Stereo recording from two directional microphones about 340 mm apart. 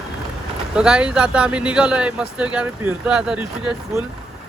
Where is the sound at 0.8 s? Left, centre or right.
Centre.